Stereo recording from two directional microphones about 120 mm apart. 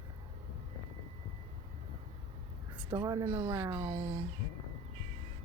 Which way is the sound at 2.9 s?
40° right (ahead or behind).